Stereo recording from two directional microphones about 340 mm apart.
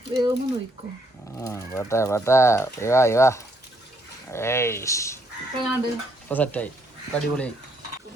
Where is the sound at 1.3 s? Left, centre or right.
Centre.